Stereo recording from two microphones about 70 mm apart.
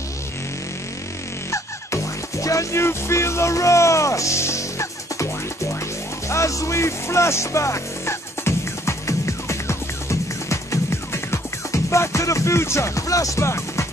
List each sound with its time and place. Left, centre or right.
1.5 s music: left